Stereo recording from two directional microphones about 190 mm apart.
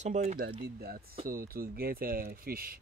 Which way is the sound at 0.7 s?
55° right (ahead or behind).